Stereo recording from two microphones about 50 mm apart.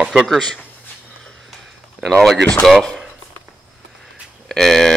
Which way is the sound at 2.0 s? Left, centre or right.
Centre.